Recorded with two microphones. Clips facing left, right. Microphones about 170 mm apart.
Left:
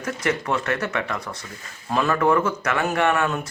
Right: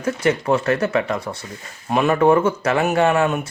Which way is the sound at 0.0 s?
30° right (ahead or behind).